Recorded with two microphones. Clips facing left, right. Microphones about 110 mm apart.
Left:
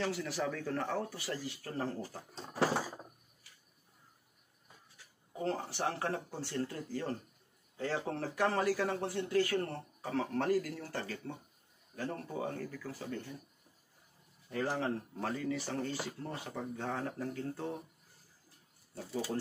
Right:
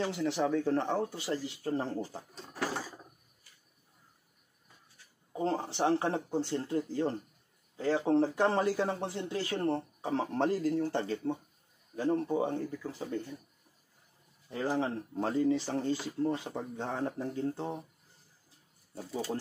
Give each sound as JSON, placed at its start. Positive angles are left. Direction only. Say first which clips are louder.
{"t": 0.0, "sound": "speech", "louder": "right 5 dB", "side_deg": -25}
{"t": 5.4, "sound": "speech", "louder": "right 5 dB", "side_deg": -25}
{"t": 14.5, "sound": "speech", "louder": "right 3 dB", "side_deg": -25}